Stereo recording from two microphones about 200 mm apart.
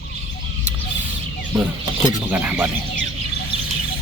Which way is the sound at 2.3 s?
10° right (ahead or behind).